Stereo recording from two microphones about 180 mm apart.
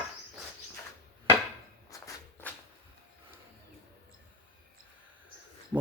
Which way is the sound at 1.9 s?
20° left (ahead or behind).